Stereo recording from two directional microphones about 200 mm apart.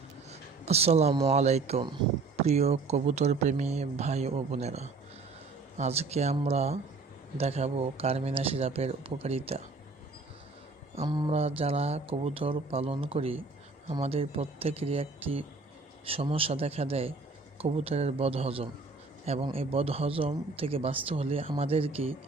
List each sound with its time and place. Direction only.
0.3 s speech: 30° right (ahead or behind)
10.9 s speech: 25° right (ahead or behind)